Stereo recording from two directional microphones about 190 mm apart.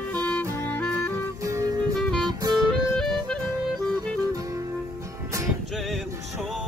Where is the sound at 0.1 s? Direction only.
10° left (ahead or behind).